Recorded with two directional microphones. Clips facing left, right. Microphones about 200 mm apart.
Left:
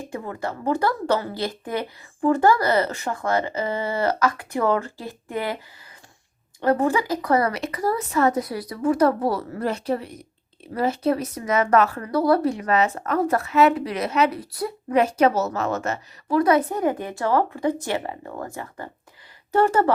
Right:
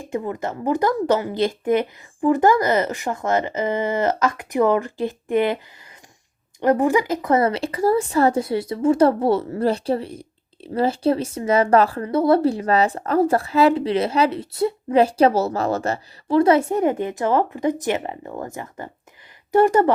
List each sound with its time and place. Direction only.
0.1 s speech: 20° right (ahead or behind)
6.6 s speech: 15° right (ahead or behind)